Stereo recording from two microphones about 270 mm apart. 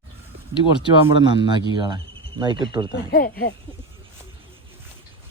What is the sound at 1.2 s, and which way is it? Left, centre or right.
Speech, centre.